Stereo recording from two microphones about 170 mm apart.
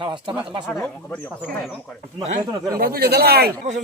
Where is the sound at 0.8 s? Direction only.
10° left (ahead or behind).